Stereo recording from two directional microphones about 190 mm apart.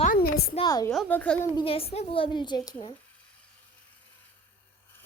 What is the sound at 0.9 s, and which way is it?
Speech, 5° left (ahead or behind).